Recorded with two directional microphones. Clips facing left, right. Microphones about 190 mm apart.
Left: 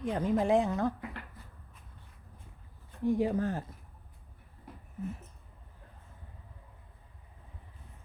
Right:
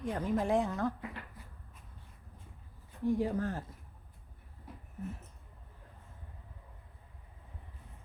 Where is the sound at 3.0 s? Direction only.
20° left (ahead or behind).